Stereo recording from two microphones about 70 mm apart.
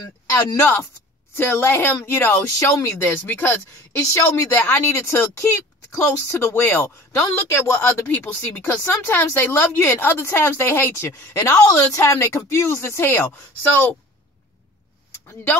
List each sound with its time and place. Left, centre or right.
1.3 s speech: left
8.1 s speech: left
11.3 s speech: left